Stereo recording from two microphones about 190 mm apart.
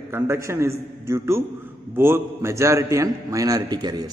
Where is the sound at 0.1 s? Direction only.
15° right (ahead or behind).